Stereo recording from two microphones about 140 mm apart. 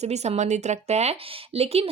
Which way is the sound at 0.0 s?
50° right (ahead or behind).